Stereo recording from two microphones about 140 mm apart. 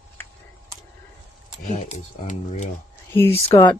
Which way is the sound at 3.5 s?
35° left (ahead or behind).